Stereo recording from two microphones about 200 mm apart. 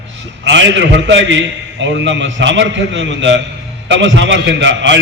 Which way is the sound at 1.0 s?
65° right (ahead or behind).